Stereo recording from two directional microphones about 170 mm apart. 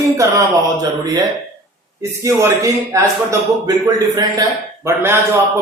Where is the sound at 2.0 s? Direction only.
15° right (ahead or behind).